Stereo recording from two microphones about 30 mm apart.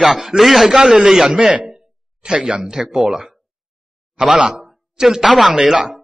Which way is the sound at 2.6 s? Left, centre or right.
Centre.